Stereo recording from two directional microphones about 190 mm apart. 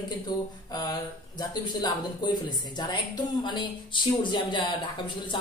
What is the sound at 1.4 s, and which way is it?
Speech, 20° left (ahead or behind).